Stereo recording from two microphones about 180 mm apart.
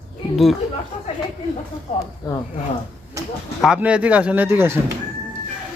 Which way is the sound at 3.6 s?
5° right (ahead or behind).